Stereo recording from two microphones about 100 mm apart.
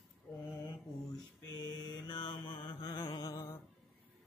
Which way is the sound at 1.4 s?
45° left (ahead or behind).